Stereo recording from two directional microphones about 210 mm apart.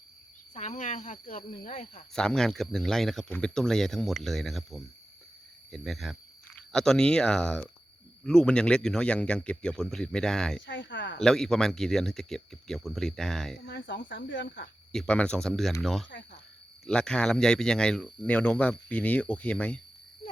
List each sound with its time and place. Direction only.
0.5 s speech: 35° left (ahead or behind)
2.1 s speech: 5° left (ahead or behind)
10.7 s speech: 60° left (ahead or behind)
11.2 s speech: centre (ahead or behind)
13.7 s speech: 55° left (ahead or behind)
14.9 s speech: 5° left (ahead or behind)